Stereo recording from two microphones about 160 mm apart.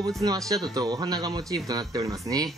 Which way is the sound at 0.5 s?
25° right (ahead or behind).